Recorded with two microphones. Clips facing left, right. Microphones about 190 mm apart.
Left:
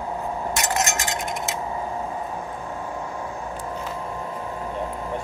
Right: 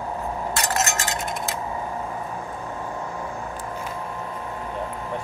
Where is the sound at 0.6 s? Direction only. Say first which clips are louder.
Even; 15° left (ahead or behind).